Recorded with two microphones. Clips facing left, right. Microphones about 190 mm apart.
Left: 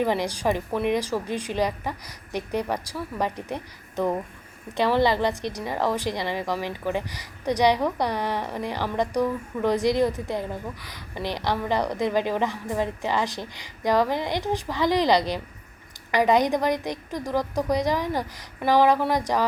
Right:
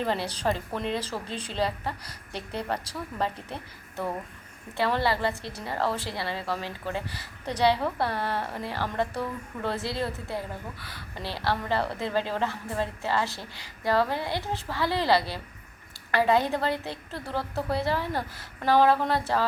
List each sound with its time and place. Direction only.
0.0 s a woman's voice: 15° left (ahead or behind)